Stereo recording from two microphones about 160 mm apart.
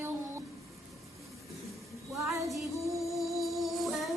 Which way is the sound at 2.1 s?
20° right (ahead or behind).